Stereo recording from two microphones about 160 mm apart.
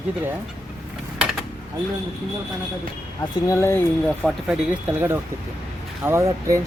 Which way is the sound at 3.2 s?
20° left (ahead or behind).